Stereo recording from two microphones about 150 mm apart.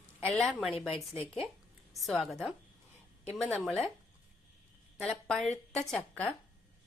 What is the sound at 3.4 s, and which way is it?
Speech, 5° left (ahead or behind).